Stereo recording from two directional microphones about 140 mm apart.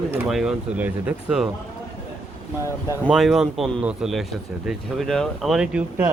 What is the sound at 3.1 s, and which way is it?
A man's voice, centre (ahead or behind).